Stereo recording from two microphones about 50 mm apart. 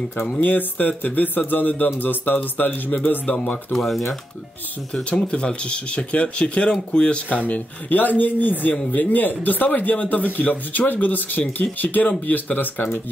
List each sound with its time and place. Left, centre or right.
0.2 s speech: left
3.7 s speech: centre
4.9 s speech: centre
7.2 s speech: left